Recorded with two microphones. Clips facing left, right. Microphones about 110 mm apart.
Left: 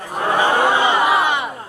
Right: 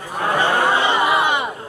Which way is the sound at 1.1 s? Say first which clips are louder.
Left 1 dB; centre (ahead or behind).